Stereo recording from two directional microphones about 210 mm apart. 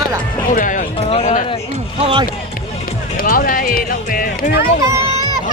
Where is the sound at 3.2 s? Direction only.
40° left (ahead or behind).